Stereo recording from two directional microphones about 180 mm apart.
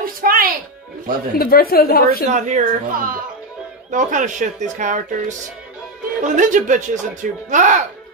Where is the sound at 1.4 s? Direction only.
55° left (ahead or behind).